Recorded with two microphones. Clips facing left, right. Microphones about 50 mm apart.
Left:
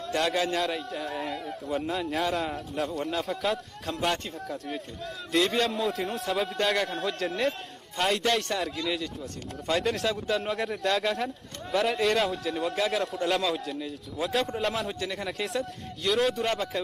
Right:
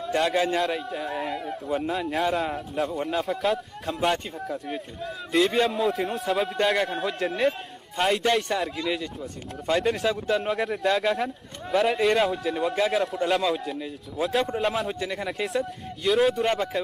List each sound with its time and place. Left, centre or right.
0.0 s a man's voice: centre
13.7 s a man's voice: centre